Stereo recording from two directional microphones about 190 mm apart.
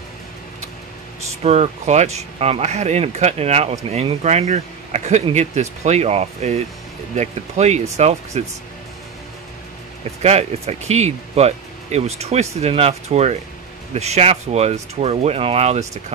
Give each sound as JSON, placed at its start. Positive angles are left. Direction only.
{"t": 1.4, "sound": "speech", "side_deg": -35}
{"t": 10.2, "sound": "speech", "side_deg": -35}